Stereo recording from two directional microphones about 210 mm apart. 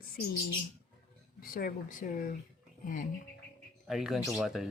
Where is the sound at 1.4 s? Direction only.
45° left (ahead or behind).